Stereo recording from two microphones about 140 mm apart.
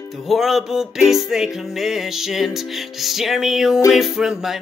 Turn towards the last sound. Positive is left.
turn(degrees=-5)  # may be behind; listen again after turning